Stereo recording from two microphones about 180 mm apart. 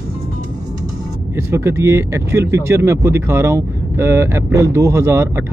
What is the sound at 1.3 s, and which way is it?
Speech, 15° right (ahead or behind).